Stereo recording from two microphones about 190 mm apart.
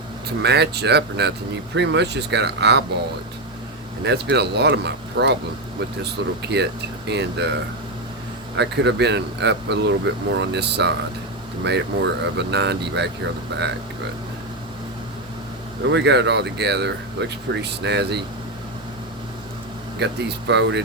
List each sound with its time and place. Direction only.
0.3 s speech: 60° right (ahead or behind)
4.0 s speech: 65° right (ahead or behind)
8.5 s speech: 65° right (ahead or behind)
15.8 s speech: 65° right (ahead or behind)
20.0 s speech: 65° right (ahead or behind)